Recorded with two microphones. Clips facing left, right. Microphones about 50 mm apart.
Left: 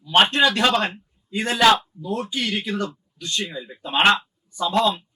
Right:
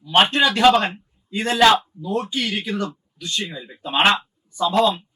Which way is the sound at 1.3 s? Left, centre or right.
Centre.